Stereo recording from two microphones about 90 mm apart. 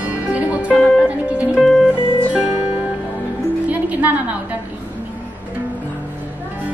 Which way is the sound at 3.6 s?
15° right (ahead or behind).